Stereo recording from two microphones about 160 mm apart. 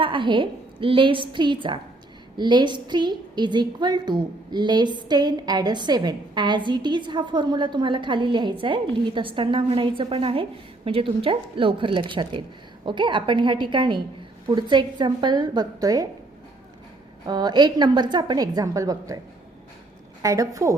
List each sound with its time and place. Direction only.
0.0 s a woman's voice: 30° right (ahead or behind)
17.2 s a woman's voice: 25° right (ahead or behind)
20.2 s a woman's voice: 20° right (ahead or behind)